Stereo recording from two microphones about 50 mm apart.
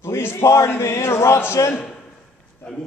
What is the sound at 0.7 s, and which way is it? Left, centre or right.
Speech, left.